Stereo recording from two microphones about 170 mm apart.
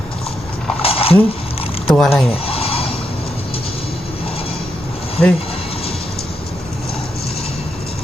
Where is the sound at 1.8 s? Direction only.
5° left (ahead or behind).